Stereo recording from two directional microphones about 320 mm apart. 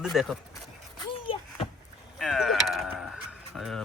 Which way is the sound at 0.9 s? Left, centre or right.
Centre.